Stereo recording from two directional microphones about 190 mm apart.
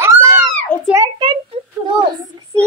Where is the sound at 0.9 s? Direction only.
20° right (ahead or behind).